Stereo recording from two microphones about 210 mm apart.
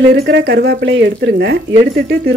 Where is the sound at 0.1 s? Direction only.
55° right (ahead or behind).